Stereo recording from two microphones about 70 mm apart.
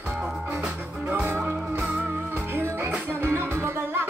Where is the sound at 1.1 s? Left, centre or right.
Right.